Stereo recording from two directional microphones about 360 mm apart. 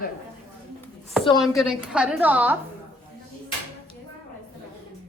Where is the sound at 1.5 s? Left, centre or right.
Centre.